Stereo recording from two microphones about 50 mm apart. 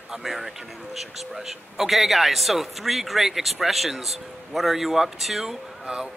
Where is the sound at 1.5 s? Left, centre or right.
Centre.